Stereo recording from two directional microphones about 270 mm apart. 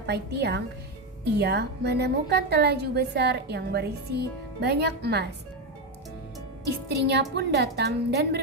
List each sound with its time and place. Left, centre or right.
0.1 s a woman's voice: right
6.7 s a woman's voice: right